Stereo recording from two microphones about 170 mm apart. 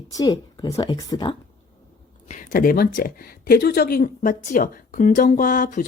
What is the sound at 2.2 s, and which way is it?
Speech, 50° left (ahead or behind).